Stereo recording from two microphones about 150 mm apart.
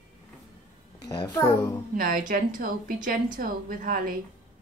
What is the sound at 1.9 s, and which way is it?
A woman's voice, 70° right (ahead or behind).